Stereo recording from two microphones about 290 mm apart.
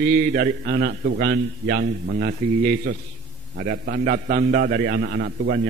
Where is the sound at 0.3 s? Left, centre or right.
Right.